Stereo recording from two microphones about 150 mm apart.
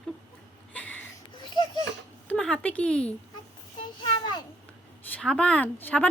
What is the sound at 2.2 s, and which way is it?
Speech, 5° left (ahead or behind).